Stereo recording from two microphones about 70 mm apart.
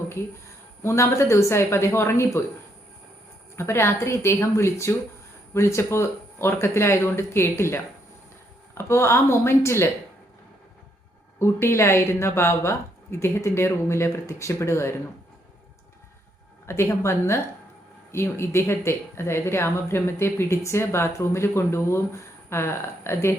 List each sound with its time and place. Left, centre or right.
0.8 s speech: left
3.5 s speech: left
8.8 s speech: left
11.3 s speech: left
16.6 s speech: left